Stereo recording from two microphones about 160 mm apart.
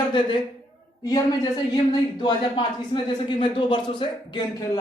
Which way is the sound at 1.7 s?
30° left (ahead or behind).